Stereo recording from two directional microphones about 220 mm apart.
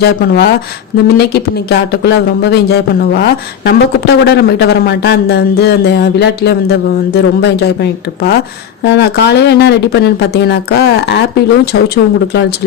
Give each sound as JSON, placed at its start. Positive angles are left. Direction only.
{"t": 0.0, "sound": "speech", "side_deg": 50}